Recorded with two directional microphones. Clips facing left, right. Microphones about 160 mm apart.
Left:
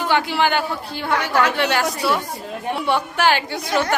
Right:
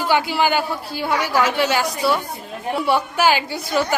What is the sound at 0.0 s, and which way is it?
A man's voice, 5° right (ahead or behind).